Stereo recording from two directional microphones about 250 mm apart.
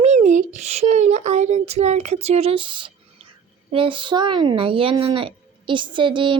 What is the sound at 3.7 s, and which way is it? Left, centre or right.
A child's voice, centre.